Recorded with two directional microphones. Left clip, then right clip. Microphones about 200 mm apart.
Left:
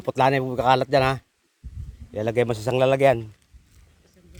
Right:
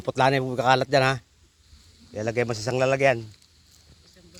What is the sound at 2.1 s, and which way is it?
A man's voice, 30° left (ahead or behind).